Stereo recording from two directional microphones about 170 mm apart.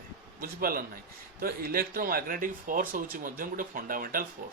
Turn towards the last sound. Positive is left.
turn(degrees=-55)  # may be behind; listen again after turning